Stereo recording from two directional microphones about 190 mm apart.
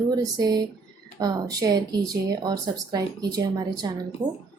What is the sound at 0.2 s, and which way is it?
Speech, 20° right (ahead or behind).